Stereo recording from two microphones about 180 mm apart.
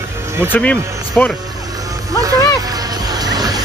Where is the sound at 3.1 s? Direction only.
20° right (ahead or behind).